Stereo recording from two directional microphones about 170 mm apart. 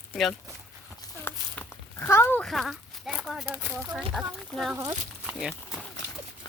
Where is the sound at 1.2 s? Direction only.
10° left (ahead or behind).